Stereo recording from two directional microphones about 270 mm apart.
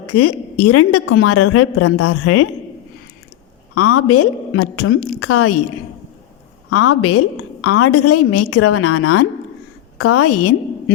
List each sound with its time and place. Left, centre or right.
0.1 s a woman's voice: left
3.8 s a woman's voice: left
6.7 s a woman's voice: left